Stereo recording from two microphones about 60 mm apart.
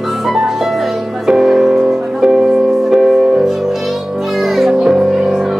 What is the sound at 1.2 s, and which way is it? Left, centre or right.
Music, centre.